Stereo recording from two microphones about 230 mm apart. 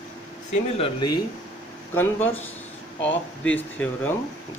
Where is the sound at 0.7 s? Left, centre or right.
Left.